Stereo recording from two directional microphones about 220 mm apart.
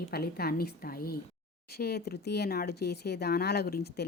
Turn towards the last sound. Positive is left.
turn(degrees=45)  # may be behind; listen again after turning